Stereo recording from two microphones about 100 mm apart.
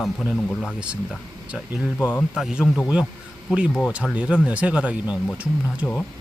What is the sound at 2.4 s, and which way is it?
Speech, 5° right (ahead or behind).